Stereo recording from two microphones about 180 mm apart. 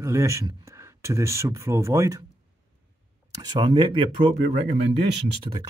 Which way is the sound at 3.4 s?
25° right (ahead or behind).